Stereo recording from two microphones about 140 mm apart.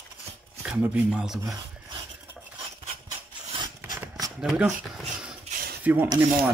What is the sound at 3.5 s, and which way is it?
Zipper, 30° right (ahead or behind).